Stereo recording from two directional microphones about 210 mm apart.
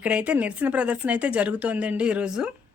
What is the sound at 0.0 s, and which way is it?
Speech, 5° right (ahead or behind).